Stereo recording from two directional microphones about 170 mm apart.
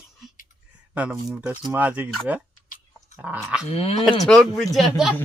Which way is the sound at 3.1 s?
10° right (ahead or behind).